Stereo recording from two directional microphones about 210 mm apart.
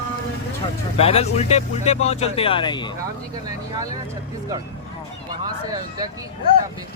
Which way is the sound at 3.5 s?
20° right (ahead or behind).